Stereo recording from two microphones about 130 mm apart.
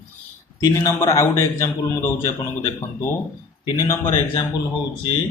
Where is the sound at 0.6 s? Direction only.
20° left (ahead or behind).